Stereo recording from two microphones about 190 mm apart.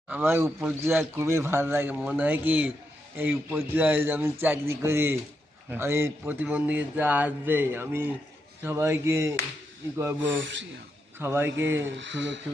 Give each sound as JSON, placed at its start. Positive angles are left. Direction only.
{"t": 0.1, "sound": "a man's voice", "side_deg": -10}
{"t": 10.4, "sound": "speech", "side_deg": -75}
{"t": 11.2, "sound": "a man's voice", "side_deg": -15}
{"t": 11.9, "sound": "speech", "side_deg": -75}